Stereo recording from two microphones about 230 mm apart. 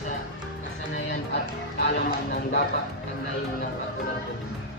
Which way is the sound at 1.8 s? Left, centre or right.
Left.